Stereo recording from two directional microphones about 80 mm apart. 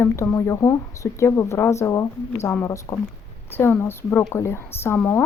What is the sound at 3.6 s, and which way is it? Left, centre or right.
Speech, left.